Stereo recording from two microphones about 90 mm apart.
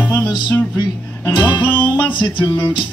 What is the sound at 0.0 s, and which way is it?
Music, 20° left (ahead or behind).